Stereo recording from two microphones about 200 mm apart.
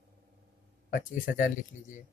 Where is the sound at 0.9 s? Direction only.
45° left (ahead or behind).